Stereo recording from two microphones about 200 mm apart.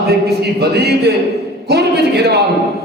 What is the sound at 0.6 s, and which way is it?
Speech, 55° right (ahead or behind).